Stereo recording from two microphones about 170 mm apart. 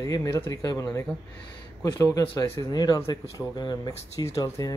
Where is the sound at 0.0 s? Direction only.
20° left (ahead or behind).